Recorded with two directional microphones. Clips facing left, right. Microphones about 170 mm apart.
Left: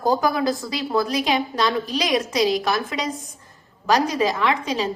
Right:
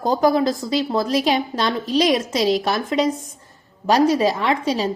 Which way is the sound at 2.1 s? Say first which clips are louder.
Right 1 dB; 25° right (ahead or behind).